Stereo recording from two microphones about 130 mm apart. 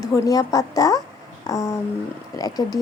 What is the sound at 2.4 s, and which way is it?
Speech, 30° left (ahead or behind).